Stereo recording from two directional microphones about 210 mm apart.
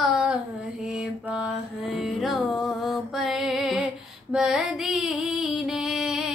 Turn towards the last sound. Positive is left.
turn(degrees=0)  # may be behind; listen again after turning